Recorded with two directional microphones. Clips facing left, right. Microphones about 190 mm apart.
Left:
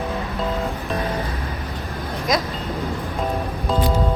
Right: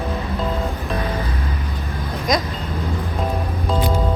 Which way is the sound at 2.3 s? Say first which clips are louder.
Right 1 dB; centre (ahead or behind).